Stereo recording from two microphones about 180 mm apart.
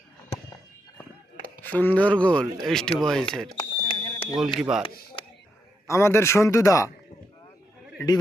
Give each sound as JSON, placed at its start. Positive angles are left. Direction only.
{"t": 1.6, "sound": "speech", "side_deg": 10}
{"t": 3.6, "sound": "a sound", "side_deg": 30}
{"t": 4.4, "sound": "speech", "side_deg": 0}
{"t": 5.2, "sound": "a sound", "side_deg": 30}
{"t": 5.9, "sound": "speech", "side_deg": 15}
{"t": 7.9, "sound": "a man's voice", "side_deg": 20}